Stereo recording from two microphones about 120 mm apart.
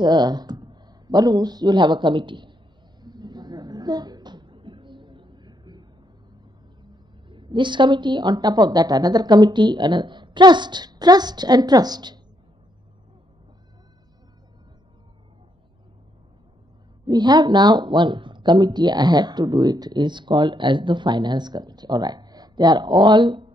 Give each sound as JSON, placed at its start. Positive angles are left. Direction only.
{"t": 0.0, "sound": "speech", "side_deg": -35}
{"t": 3.0, "sound": "a sound", "side_deg": -35}
{"t": 6.8, "sound": "a woman's voice", "side_deg": -40}
{"t": 17.0, "sound": "speech", "side_deg": -35}